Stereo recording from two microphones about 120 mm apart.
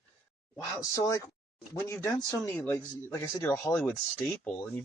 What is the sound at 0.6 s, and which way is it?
Speech, 30° left (ahead or behind).